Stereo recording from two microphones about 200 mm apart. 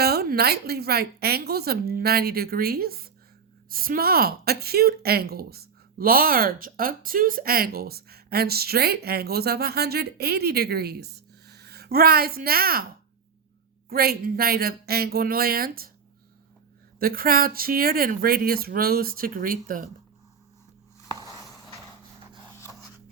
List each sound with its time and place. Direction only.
0.0 s a woman's voice: 50° right (ahead or behind)
13.9 s a woman's voice: 50° right (ahead or behind)
17.0 s a woman's voice: 45° right (ahead or behind)